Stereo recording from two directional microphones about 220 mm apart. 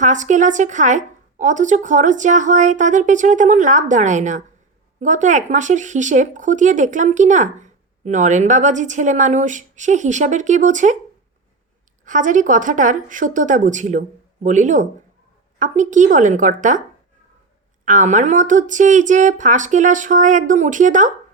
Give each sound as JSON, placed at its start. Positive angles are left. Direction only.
{"t": 0.0, "sound": "speech", "side_deg": -35}
{"t": 12.0, "sound": "speech", "side_deg": -35}
{"t": 17.8, "sound": "speech", "side_deg": -35}